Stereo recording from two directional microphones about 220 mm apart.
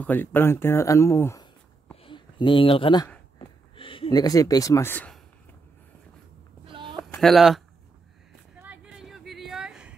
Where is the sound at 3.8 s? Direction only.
25° left (ahead or behind).